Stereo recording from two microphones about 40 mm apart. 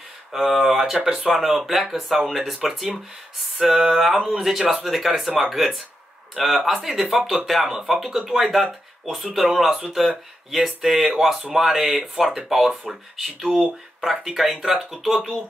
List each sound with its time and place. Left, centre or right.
0.5 s speech: centre
1.0 s speech: centre
1.3 s speech: centre